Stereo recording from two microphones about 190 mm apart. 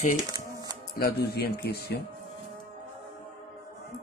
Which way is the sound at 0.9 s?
55° left (ahead or behind).